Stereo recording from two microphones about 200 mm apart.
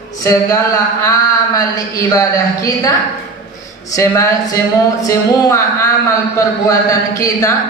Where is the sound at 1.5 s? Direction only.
15° left (ahead or behind).